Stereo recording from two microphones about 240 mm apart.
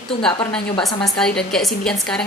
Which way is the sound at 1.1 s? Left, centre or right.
Centre.